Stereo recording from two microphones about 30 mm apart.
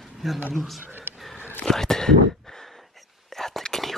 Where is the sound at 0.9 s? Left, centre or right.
Right.